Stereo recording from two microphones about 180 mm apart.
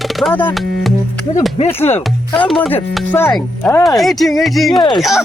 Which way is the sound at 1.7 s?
10° left (ahead or behind).